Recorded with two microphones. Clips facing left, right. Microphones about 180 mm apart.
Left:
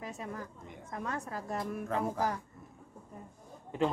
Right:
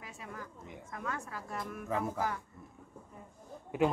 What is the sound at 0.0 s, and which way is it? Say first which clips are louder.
A woman's voice: left 5 dB; 40° left (ahead or behind).